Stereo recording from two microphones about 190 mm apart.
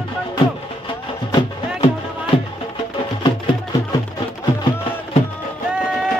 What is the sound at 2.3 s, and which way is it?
Music, 30° left (ahead or behind).